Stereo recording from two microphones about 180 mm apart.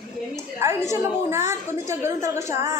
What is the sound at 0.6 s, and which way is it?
A woman's voice, 15° right (ahead or behind).